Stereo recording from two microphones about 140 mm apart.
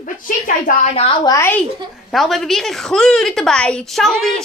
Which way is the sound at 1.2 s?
20° left (ahead or behind).